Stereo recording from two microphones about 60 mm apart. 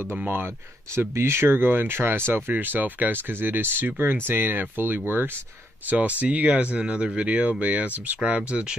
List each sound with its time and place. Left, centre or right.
0.9 s speech: right